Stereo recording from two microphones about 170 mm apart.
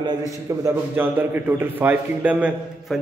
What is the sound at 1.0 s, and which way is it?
A man's voice, 10° right (ahead or behind).